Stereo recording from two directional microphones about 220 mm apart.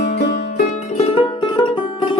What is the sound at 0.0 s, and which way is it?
Music, 35° left (ahead or behind).